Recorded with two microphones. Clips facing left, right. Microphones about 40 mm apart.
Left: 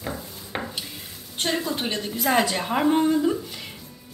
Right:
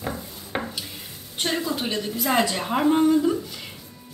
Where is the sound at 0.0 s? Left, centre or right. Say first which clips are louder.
Right 1 dB; centre.